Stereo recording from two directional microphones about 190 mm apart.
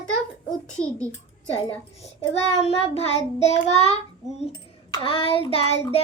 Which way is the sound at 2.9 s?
30° left (ahead or behind).